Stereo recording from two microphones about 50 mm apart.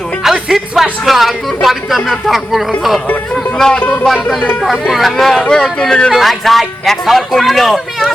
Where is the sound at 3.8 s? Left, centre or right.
Left.